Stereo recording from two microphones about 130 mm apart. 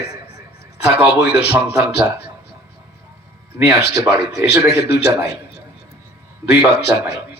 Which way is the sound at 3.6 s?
20° right (ahead or behind).